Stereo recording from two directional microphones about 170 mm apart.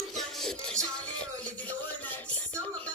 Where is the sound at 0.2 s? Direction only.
Centre (ahead or behind).